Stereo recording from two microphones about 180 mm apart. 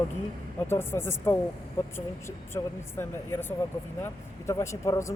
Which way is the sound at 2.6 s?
20° left (ahead or behind).